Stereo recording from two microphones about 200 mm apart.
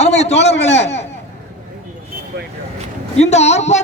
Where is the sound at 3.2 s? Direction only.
35° left (ahead or behind).